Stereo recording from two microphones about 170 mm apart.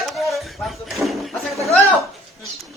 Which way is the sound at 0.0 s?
Centre (ahead or behind).